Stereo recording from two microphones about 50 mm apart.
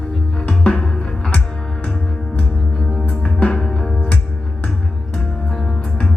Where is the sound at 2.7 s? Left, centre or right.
Centre.